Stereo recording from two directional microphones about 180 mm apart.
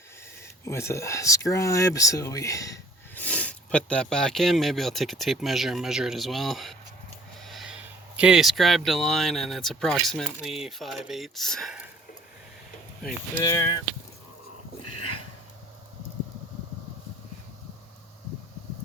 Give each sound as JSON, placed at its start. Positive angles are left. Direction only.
{"t": 0.6, "sound": "speech", "side_deg": 15}
{"t": 3.2, "sound": "speech", "side_deg": 5}
{"t": 13.0, "sound": "speech", "side_deg": 0}
{"t": 13.4, "sound": "speech", "side_deg": 20}